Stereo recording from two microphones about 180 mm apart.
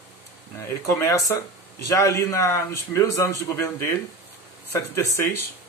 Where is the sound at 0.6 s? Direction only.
15° left (ahead or behind).